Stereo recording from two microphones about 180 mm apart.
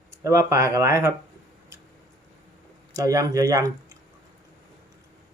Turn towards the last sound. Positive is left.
turn(degrees=-20)  # may be behind; listen again after turning